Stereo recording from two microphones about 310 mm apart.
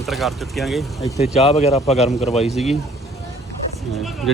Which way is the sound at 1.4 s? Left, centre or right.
Centre.